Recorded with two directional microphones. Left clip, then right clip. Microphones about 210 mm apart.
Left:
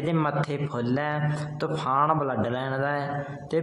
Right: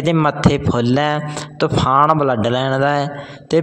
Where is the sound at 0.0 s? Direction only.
35° right (ahead or behind).